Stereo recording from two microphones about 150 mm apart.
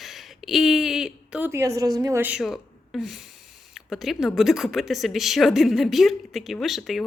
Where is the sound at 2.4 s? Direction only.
Centre (ahead or behind).